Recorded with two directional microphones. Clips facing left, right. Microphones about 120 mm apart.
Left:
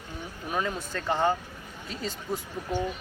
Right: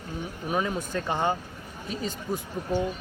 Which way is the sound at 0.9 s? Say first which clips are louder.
Left 2 dB; 15° right (ahead or behind).